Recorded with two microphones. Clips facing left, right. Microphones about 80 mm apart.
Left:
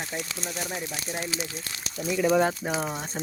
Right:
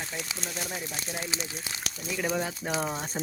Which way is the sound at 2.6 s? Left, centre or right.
Centre.